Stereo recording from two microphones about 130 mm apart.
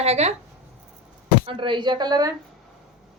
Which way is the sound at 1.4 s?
40° right (ahead or behind).